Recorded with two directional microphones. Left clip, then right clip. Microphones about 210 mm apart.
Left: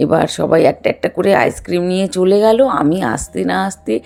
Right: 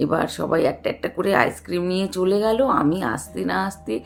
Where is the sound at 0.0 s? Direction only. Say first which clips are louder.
Left 8 dB; 35° left (ahead or behind).